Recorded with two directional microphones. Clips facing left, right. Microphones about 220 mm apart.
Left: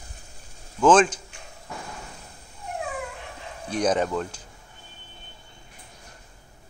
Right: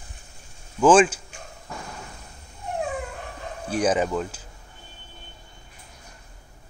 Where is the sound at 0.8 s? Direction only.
10° right (ahead or behind).